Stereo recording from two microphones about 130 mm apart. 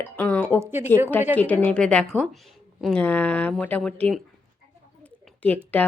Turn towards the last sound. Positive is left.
turn(degrees=10)  # may be behind; listen again after turning